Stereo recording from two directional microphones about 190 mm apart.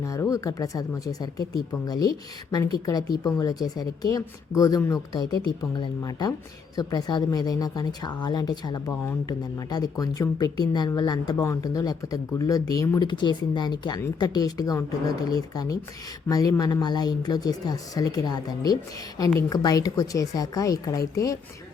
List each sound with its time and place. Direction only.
0.0 s speech: 15° left (ahead or behind)